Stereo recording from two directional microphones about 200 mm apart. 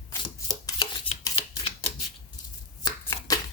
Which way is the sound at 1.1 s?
30° left (ahead or behind).